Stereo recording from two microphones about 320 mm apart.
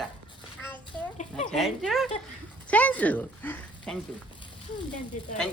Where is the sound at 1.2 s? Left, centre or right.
Left.